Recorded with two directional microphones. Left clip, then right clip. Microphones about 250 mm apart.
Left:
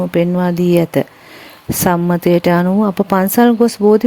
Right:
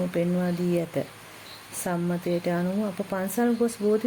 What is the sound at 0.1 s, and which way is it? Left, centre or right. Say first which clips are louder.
Speech: left 12 dB; left.